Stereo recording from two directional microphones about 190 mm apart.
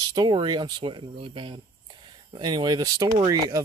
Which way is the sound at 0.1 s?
25° right (ahead or behind).